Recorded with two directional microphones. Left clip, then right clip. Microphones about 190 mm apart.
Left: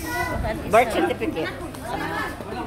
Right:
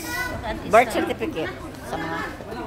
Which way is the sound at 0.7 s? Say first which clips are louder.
Right 1 dB; 25° right (ahead or behind).